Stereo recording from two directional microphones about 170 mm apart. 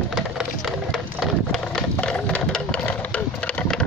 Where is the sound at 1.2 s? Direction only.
5° left (ahead or behind).